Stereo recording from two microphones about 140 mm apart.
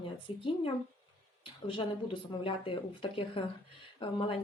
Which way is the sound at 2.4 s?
40° left (ahead or behind).